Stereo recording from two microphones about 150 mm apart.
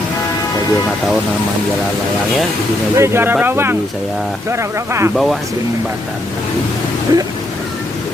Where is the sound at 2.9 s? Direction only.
20° right (ahead or behind).